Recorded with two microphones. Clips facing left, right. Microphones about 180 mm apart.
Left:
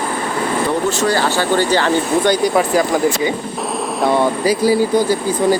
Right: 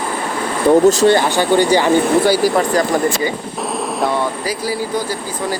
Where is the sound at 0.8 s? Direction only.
35° right (ahead or behind).